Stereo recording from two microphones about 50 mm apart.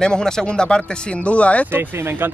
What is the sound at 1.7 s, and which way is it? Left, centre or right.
Speech, right.